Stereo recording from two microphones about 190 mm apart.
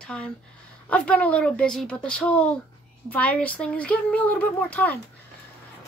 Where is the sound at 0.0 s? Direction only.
5° left (ahead or behind).